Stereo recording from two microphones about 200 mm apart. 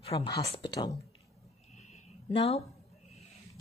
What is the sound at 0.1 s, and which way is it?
Speech, 25° left (ahead or behind).